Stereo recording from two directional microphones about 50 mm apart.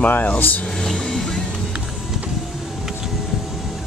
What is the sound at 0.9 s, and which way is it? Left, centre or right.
Vehicle, centre.